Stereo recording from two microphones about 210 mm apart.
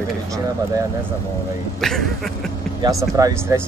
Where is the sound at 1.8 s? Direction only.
Centre (ahead or behind).